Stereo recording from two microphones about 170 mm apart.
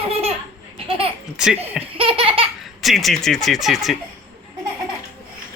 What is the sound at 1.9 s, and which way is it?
Laughter, 30° right (ahead or behind).